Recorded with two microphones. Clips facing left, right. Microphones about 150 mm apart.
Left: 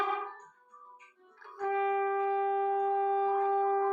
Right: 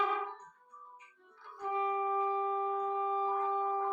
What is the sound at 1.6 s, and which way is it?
Shofar, 65° left (ahead or behind).